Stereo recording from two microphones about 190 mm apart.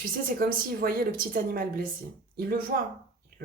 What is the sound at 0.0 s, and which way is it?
A woman's voice, 50° right (ahead or behind).